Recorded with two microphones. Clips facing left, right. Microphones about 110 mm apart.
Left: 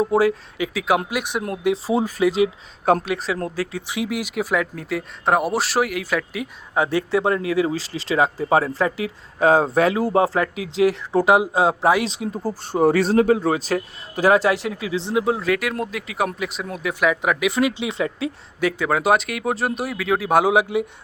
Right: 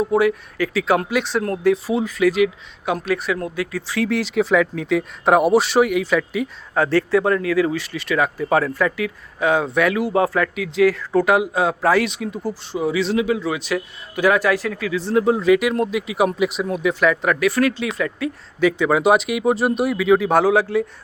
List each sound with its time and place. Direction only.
0.0 s speech: 30° left (ahead or behind)
0.7 s speech: 10° left (ahead or behind)
1.7 s a man's voice: 35° left (ahead or behind); by 6.5 s 5° left (ahead or behind)
6.7 s speech: 15° left (ahead or behind)
12.0 s a man's voice: 30° left (ahead or behind)
12.5 s a man's voice: 45° left (ahead or behind); by 15.1 s 25° left (ahead or behind)
15.1 s speech: 5° left (ahead or behind)
17.5 s speech: 20° left (ahead or behind)
18.6 s speech: centre (ahead or behind)